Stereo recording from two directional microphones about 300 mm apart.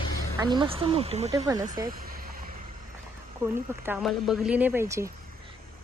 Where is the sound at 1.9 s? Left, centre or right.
Right.